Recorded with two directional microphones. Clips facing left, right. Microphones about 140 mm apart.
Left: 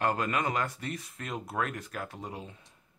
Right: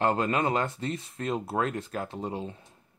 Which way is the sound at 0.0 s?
25° right (ahead or behind).